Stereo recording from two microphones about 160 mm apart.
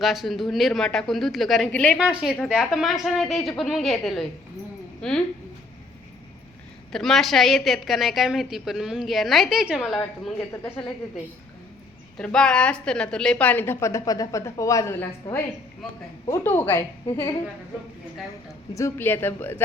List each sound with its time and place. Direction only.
0.0 s a woman's voice: centre (ahead or behind)
2.0 s a woman's voice: 5° right (ahead or behind)
6.9 s a woman's voice: centre (ahead or behind)
10.5 s a woman's voice: 15° left (ahead or behind)
12.1 s a woman's voice: 5° left (ahead or behind)
18.7 s a woman's voice: 20° left (ahead or behind)